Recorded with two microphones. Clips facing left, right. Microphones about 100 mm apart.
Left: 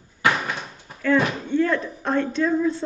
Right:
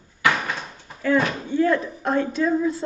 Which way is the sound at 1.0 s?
10° right (ahead or behind).